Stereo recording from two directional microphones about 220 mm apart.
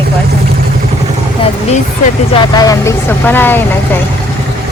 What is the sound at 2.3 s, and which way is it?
Speech, 15° left (ahead or behind).